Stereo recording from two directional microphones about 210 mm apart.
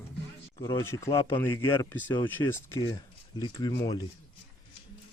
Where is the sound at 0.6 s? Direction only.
15° left (ahead or behind).